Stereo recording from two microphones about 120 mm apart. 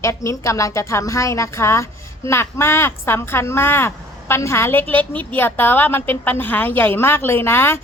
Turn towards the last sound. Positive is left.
turn(degrees=20)  # may be behind; listen again after turning